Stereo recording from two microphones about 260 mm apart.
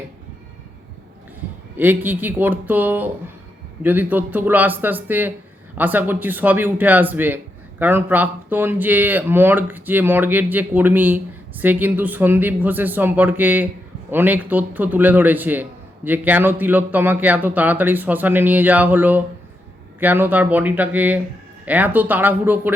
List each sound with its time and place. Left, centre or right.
1.8 s speech: centre